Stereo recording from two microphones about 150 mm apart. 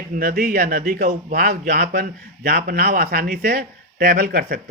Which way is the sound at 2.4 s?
90° right.